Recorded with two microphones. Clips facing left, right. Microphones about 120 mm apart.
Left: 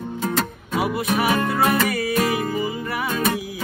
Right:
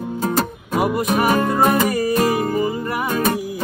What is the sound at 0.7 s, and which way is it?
Music, 50° right (ahead or behind).